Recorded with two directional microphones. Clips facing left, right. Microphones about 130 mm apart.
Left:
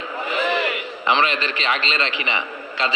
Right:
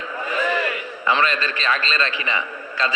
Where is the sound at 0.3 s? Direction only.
20° left (ahead or behind).